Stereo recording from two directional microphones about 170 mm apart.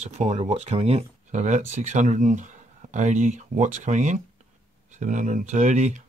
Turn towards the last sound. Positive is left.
turn(degrees=-45)  # may be behind; listen again after turning